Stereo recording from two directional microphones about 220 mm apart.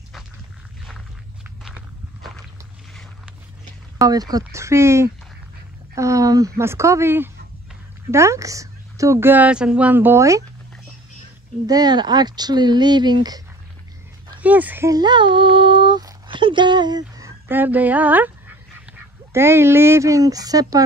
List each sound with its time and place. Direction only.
0.8 s walk: centre (ahead or behind)
2.9 s a sound: centre (ahead or behind)
4.0 s a woman's voice: 15° right (ahead or behind)
11.6 s speech: 15° right (ahead or behind)
14.4 s speech: 5° right (ahead or behind)
19.3 s a woman's voice: 10° right (ahead or behind)